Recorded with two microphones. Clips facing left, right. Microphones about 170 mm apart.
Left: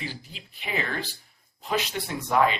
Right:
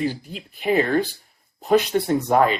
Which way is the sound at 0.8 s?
50° right (ahead or behind).